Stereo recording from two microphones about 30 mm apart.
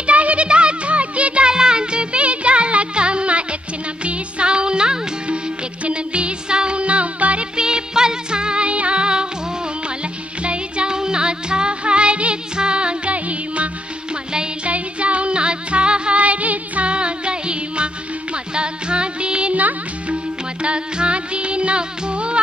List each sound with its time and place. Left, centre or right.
0.0 s music: right
0.5 s music: right
1.5 s music: right
6.8 s music: right
7.5 s music: right
10.4 s music: right
13.1 s music: right
14.7 s music: right
16.2 s music: right
16.8 s music: right
20.6 s music: right